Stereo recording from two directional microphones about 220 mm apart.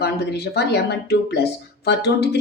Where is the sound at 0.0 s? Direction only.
50° left (ahead or behind).